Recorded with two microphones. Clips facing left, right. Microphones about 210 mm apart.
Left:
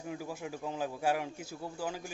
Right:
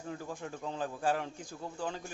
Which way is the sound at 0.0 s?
10° left (ahead or behind).